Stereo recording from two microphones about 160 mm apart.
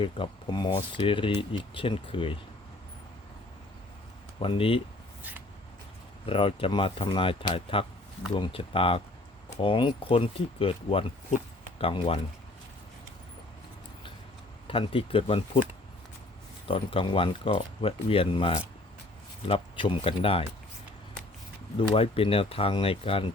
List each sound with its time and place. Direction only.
0.0 s speech: 30° left (ahead or behind)
4.4 s speech: 35° left (ahead or behind)
6.2 s speech: 35° left (ahead or behind)
14.7 s speech: 35° left (ahead or behind)
16.6 s speech: 35° left (ahead or behind)
21.8 s speech: 35° left (ahead or behind)